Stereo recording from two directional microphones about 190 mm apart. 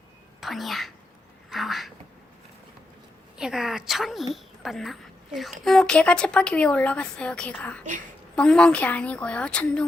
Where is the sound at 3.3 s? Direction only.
5° right (ahead or behind).